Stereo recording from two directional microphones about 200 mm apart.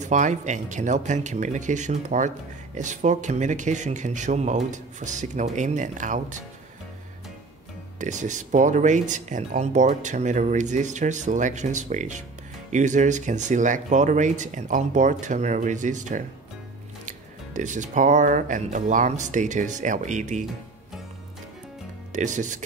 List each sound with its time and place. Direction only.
0.0 s speech: 35° right (ahead or behind)
8.0 s speech: 40° right (ahead or behind)
17.6 s speech: 40° right (ahead or behind)
22.1 s speech: 40° right (ahead or behind)